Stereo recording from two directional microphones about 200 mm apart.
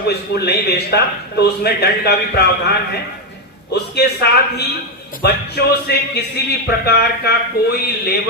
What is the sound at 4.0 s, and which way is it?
A man's voice, 55° left (ahead or behind).